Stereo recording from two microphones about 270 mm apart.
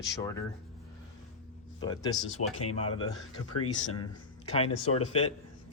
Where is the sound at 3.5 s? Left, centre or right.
Left.